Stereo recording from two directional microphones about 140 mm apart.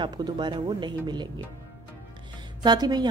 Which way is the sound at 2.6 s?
30° right (ahead or behind).